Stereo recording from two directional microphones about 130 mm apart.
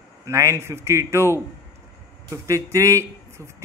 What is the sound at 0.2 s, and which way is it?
Speech, 25° right (ahead or behind).